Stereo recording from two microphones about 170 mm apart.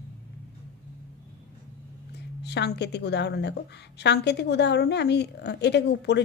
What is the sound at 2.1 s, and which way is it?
A woman's voice, 80° left.